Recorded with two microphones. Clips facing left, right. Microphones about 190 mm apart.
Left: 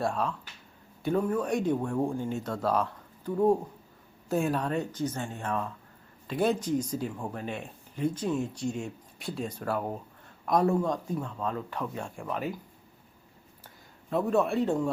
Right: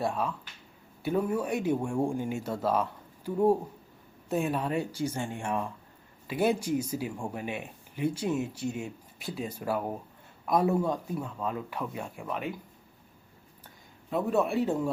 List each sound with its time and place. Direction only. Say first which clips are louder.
0.0 s speech: left 1 dB; centre (ahead or behind)
14.1 s speech: left 1 dB; centre (ahead or behind)